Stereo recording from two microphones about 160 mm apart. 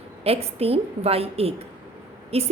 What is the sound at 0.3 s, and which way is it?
A woman's voice, 40° right (ahead or behind).